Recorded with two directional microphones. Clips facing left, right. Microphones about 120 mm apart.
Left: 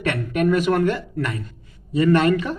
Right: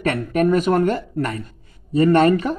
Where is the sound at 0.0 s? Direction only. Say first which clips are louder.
Right 2 dB; 40° right (ahead or behind).